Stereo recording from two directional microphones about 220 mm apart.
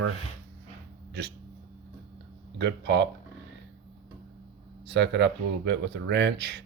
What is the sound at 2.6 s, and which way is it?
Speech, 50° right (ahead or behind).